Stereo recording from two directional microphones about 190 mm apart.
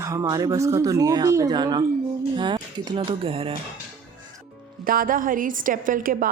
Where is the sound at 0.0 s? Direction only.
15° right (ahead or behind).